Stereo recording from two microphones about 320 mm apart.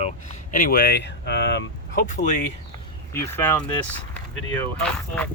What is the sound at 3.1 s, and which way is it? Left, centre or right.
Speech, centre.